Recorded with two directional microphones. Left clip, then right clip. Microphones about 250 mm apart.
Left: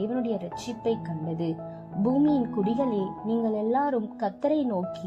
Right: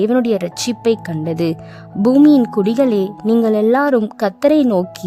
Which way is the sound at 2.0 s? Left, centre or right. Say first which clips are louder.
Right 13 dB; right.